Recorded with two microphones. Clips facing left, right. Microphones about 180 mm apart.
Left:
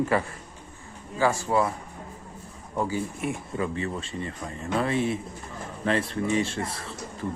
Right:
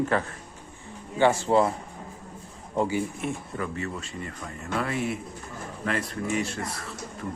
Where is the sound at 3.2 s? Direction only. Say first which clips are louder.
Left 1 dB; 5° left (ahead or behind).